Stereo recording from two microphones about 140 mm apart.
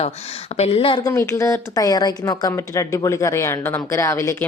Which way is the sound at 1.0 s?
20° left (ahead or behind).